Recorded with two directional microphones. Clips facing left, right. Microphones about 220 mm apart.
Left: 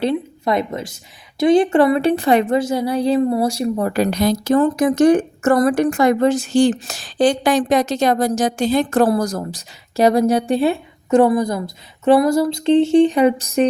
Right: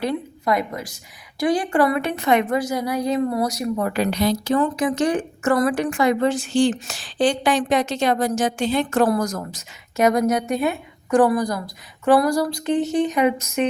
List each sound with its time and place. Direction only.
0.0 s a woman's voice: 25° left (ahead or behind)